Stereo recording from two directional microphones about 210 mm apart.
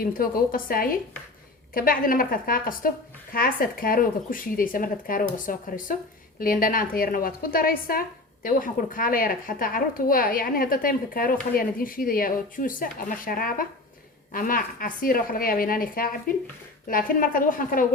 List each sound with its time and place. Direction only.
0.0 s a woman's voice: 45° left (ahead or behind)